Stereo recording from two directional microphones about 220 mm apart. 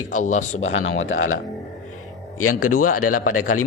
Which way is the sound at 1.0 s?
65° left (ahead or behind).